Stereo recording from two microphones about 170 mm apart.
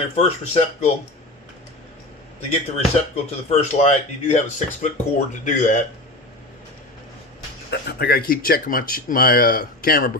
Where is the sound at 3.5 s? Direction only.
40° left (ahead or behind).